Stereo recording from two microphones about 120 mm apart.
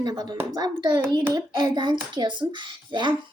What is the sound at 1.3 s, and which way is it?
Speech, 35° right (ahead or behind).